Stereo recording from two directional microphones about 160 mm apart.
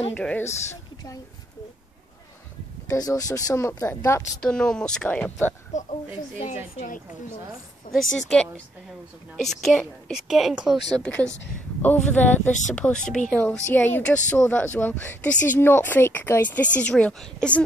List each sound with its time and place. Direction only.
0.1 s speech: 10° left (ahead or behind)
2.9 s speech: 20° left (ahead or behind)
4.4 s a woman's voice: 5° left (ahead or behind)
5.7 s a woman's voice: 50° left (ahead or behind)
7.9 s speech: 55° left (ahead or behind)
8.3 s a woman's voice: 5° left (ahead or behind)
11.0 s a woman's voice: 5° left (ahead or behind)